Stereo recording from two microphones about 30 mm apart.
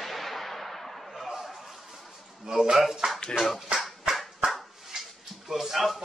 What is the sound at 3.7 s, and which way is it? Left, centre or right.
Dog, right.